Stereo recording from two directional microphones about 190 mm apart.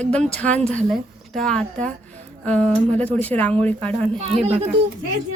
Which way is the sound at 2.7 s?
35° right (ahead or behind).